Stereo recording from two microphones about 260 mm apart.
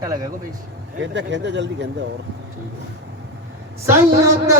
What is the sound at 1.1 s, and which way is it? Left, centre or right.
Speech, right.